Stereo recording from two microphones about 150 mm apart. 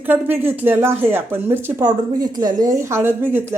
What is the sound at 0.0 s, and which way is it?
Speech, 15° right (ahead or behind).